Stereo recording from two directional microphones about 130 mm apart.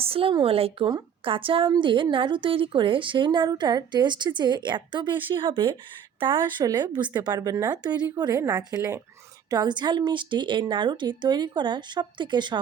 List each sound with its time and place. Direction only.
0.0 s a woman's voice: 45° right (ahead or behind)